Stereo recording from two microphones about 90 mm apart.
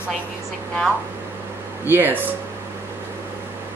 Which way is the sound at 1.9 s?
20° right (ahead or behind).